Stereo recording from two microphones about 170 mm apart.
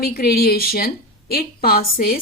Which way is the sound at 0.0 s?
65° left (ahead or behind).